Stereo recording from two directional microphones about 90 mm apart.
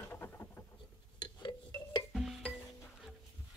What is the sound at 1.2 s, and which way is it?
Music, 50° left (ahead or behind).